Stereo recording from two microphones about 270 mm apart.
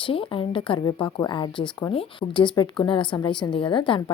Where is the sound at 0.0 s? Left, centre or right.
Centre.